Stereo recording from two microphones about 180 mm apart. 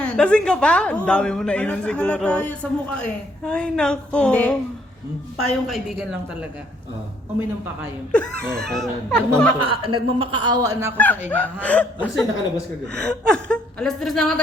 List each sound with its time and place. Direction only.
0.0 s a woman's voice: 5° left (ahead or behind)
7.3 s speech: 10° right (ahead or behind)
8.5 s a woman's voice: centre (ahead or behind)
9.6 s a man's voice: 30° right (ahead or behind)
10.9 s a woman's voice: 10° left (ahead or behind)